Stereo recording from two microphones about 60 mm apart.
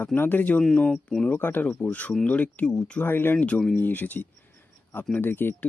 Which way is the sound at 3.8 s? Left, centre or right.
Left.